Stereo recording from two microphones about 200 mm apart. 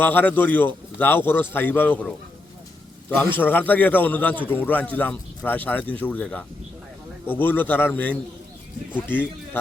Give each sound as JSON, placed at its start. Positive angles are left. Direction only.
{"t": 0.0, "sound": "a man's voice", "side_deg": 10}
{"t": 3.3, "sound": "a man's voice", "side_deg": 10}